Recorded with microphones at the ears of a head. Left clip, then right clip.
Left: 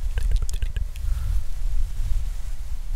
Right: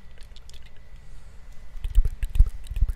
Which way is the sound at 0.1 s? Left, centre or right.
Left.